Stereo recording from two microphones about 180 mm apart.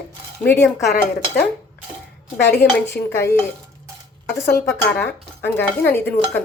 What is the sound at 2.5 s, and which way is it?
Speech, 15° left (ahead or behind).